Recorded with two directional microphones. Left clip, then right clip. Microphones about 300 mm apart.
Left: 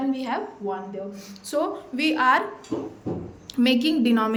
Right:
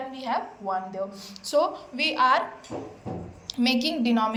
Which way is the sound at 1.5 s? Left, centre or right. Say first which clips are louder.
Right 2 dB; centre.